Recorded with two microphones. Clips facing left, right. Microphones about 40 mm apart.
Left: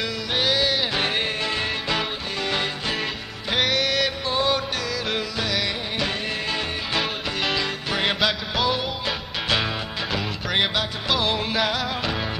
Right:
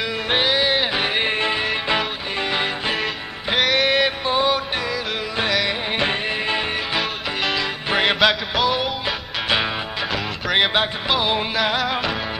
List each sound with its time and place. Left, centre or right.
0.3 s music: right
0.9 s music: centre
1.2 s music: right
1.6 s music: centre
5.9 s music: right
6.9 s music: centre
10.1 s music: centre